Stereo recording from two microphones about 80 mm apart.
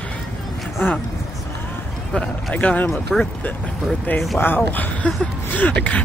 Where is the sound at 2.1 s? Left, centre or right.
Centre.